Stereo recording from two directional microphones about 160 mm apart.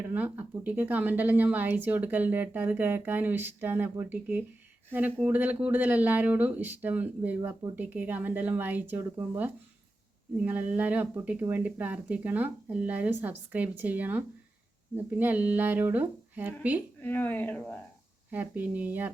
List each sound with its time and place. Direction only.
0.0 s speech: 10° right (ahead or behind)
17.0 s speech: 10° left (ahead or behind)
18.3 s speech: 10° right (ahead or behind)